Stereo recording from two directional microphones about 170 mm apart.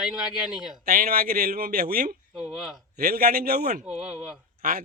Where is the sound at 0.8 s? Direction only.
60° right (ahead or behind).